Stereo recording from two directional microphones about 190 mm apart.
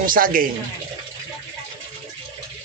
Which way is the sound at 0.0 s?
45° right (ahead or behind).